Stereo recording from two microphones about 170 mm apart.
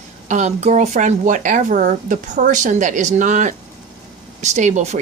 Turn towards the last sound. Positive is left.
turn(degrees=-45)  # may be behind; listen again after turning